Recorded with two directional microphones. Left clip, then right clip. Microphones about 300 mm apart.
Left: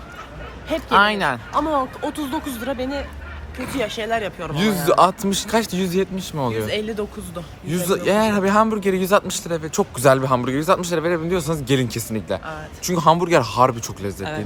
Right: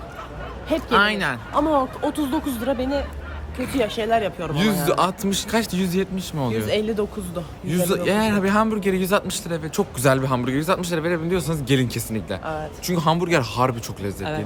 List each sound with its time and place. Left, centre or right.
0.8 s a man's voice: centre
1.5 s speech: centre
4.5 s a man's voice: centre
6.7 s speech: centre
7.7 s a man's voice: centre